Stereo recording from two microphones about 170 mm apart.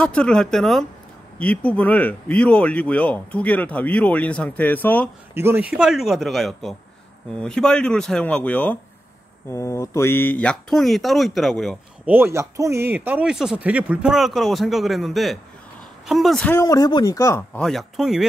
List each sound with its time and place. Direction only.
0.0 s speech: 5° left (ahead or behind)
5.3 s speech: 15° right (ahead or behind)
12.1 s speech: 15° right (ahead or behind); by 16.5 s 5° left (ahead or behind)
16.5 s speech: 20° left (ahead or behind)
17.6 s speech: centre (ahead or behind)